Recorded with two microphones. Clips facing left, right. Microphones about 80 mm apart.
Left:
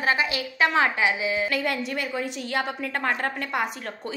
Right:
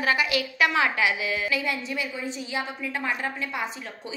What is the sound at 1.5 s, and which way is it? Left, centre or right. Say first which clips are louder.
A woman's voice: left 2 dB; left.